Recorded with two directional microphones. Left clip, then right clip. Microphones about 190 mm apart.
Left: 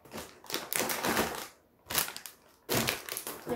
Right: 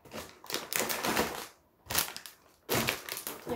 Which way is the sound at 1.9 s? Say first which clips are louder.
Even; 25° right (ahead or behind).